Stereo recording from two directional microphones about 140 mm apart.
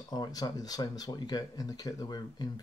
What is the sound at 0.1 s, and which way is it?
Speech, 30° left (ahead or behind).